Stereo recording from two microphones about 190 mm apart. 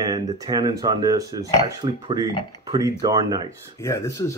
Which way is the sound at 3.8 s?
15° left (ahead or behind).